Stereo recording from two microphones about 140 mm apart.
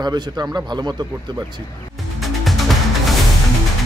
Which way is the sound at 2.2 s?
Centre (ahead or behind).